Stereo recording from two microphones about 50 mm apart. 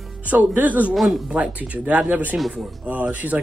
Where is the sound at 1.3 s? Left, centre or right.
Right.